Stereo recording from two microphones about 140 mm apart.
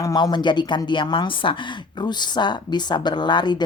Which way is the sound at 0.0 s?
30° left (ahead or behind).